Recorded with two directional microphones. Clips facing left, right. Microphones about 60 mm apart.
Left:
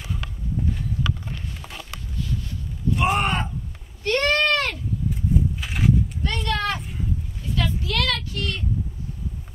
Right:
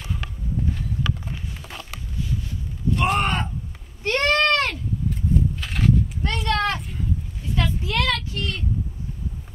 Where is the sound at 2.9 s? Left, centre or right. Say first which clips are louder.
Even; centre.